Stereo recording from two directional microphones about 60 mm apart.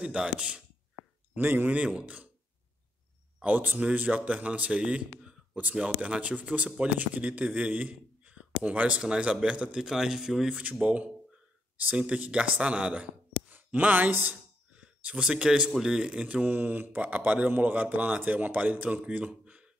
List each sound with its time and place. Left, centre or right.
0.0 s speech: centre
1.3 s speech: right
3.4 s speech: right; by 10.5 s centre
10.5 s speech: right
11.7 s a sound: right
12.0 s speech: centre